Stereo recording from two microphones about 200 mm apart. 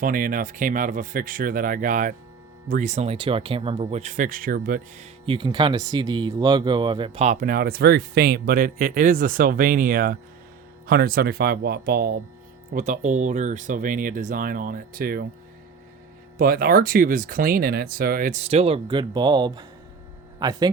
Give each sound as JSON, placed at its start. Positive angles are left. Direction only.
{"t": 0.0, "sound": "speech", "side_deg": -45}
{"t": 5.2, "sound": "speech", "side_deg": -25}
{"t": 12.7, "sound": "speech", "side_deg": -40}
{"t": 16.4, "sound": "speech", "side_deg": -50}